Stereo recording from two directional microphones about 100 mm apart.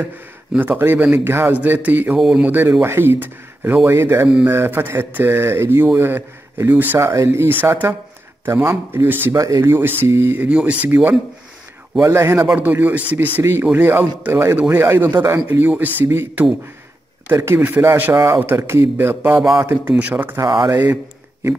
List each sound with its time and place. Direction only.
0.6 s a man's voice: 20° right (ahead or behind)
2.1 s a man's voice: 5° right (ahead or behind)
2.8 s speech: 20° right (ahead or behind)
7.0 s a man's voice: 30° right (ahead or behind)
20.3 s speech: 30° right (ahead or behind)